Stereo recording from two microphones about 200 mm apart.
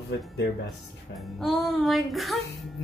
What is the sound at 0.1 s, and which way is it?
Speech, 60° left (ahead or behind).